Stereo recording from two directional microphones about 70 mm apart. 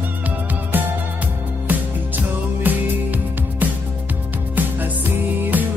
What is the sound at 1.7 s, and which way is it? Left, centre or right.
Music, right.